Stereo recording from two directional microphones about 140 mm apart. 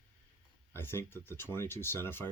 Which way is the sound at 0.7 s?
15° left (ahead or behind).